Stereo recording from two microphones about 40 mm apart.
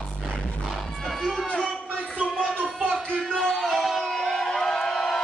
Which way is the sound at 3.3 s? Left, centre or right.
Centre.